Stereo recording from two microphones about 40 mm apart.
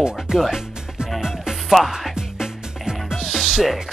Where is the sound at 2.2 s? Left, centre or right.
Centre.